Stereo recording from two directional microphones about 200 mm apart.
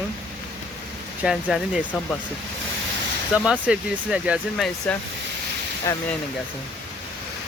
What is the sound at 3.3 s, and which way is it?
Speech, 5° right (ahead or behind).